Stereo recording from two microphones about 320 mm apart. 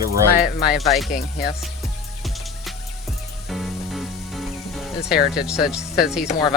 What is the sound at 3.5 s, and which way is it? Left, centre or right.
Music, centre.